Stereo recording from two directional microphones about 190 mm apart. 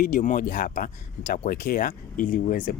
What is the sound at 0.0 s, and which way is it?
Speech, 45° left (ahead or behind).